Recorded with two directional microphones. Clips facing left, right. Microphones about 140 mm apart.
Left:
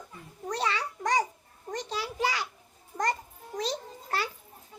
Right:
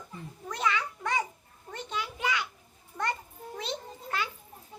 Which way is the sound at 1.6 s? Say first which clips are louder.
Left 2 dB; 35° left (ahead or behind).